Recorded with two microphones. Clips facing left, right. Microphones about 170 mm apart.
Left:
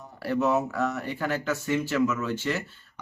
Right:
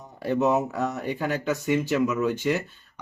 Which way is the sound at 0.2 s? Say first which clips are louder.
Right 2 dB; 20° right (ahead or behind).